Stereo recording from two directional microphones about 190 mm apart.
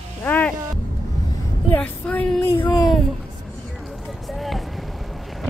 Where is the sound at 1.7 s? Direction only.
5° left (ahead or behind).